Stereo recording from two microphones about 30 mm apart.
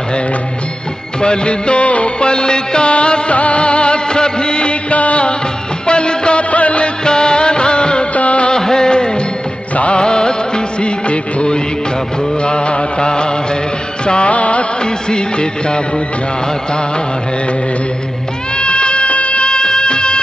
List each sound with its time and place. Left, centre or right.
1.2 s music of bollywood: left
2.2 s music: left
4.8 s music: left
5.9 s music: left
6.5 s music: left
7.1 s music of bollywood: left
8.1 s music of bollywood: left
8.5 s music of bollywood: left
12.4 s music: left
14.0 s music of bollywood: left
14.3 s music: left
15.0 s music: left
18.6 s music: left